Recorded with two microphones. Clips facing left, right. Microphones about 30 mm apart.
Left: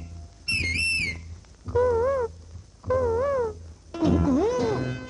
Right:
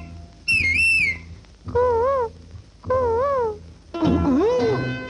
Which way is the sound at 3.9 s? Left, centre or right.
Right.